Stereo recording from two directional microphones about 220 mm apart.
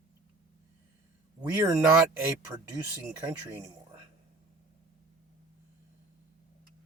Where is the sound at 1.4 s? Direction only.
10° right (ahead or behind).